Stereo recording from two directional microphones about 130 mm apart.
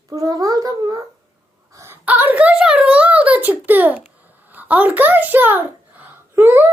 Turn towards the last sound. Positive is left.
turn(degrees=-15)  # may be behind; listen again after turning